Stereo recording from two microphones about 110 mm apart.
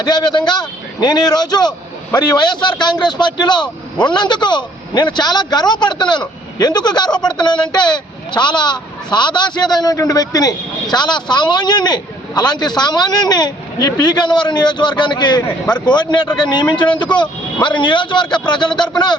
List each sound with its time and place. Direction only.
0.0 s a man's voice: 40° left (ahead or behind)